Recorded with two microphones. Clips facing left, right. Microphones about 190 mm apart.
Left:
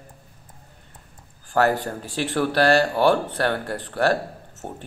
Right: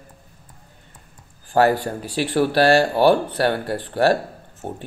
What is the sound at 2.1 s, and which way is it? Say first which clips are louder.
A man's voice: right 3 dB; 15° right (ahead or behind).